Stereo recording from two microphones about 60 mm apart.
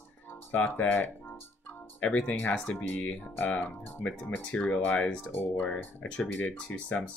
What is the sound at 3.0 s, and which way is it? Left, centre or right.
Speech, left.